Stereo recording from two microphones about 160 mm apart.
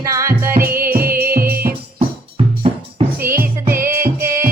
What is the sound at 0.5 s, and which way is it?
Music, 70° right (ahead or behind).